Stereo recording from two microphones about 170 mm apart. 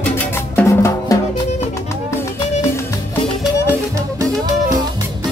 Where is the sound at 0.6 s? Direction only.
15° left (ahead or behind).